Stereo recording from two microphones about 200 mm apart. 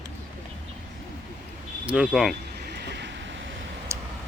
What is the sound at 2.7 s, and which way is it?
Train, 55° right (ahead or behind).